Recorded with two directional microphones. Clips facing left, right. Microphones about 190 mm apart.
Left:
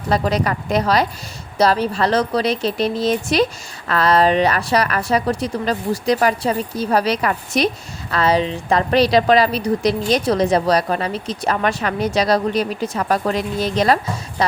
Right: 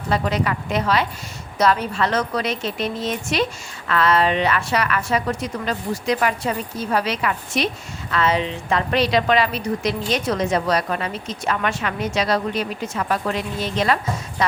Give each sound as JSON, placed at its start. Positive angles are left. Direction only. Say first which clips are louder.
{"t": 0.1, "sound": "a woman's voice", "louder": "left 3 dB", "side_deg": 40}